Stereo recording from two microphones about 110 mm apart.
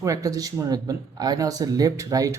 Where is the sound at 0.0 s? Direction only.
30° right (ahead or behind).